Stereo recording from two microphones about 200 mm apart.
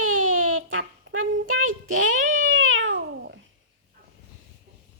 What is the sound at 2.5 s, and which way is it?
Cat, 75° right (ahead or behind).